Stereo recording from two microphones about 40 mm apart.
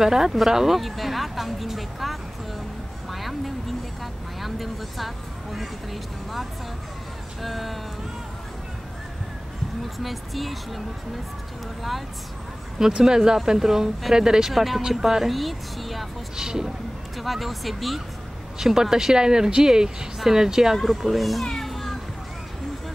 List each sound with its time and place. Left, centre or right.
0.0 s speech: centre
7.4 s speech: centre
9.9 s speech: centre
13.0 s speech: centre
14.5 s speech: centre
16.3 s speech: centre
17.2 s speech: centre
18.6 s speech: centre
21.5 s children playing: centre